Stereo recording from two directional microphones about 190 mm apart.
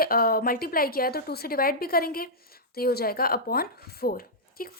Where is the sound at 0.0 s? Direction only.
50° left (ahead or behind).